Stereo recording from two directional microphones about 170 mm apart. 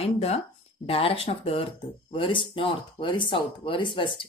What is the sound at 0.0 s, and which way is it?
A woman's voice, 35° left (ahead or behind).